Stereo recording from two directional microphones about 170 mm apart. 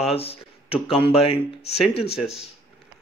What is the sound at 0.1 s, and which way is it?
Speech, 35° left (ahead or behind).